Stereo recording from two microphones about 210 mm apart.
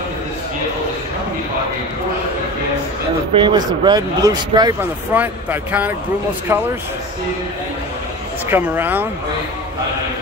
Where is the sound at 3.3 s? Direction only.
20° right (ahead or behind).